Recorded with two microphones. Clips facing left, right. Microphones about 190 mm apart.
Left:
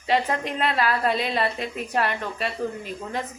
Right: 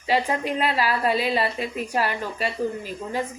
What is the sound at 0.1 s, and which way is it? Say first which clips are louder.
A woman's voice: right 1 dB; 5° right (ahead or behind).